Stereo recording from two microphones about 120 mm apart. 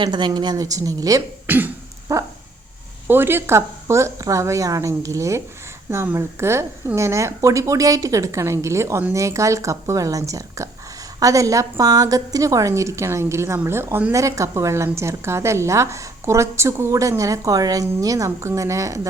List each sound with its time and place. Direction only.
0.0 s a woman's voice: 40° right (ahead or behind)
1.5 s cough: 15° right (ahead or behind)
2.1 s a woman's voice: 25° right (ahead or behind)